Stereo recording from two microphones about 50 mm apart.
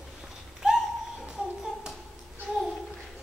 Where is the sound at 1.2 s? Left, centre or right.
Centre.